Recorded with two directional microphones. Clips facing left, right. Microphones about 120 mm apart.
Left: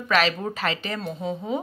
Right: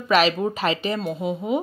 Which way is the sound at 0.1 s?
15° right (ahead or behind).